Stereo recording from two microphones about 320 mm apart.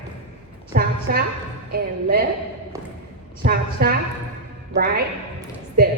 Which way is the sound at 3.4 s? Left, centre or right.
Right.